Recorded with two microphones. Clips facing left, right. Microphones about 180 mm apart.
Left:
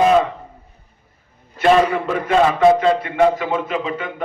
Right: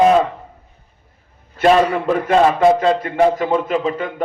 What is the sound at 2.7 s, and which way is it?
A man's voice, 45° right (ahead or behind).